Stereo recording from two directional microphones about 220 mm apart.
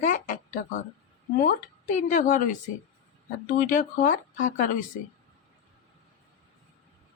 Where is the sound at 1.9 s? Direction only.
35° left (ahead or behind).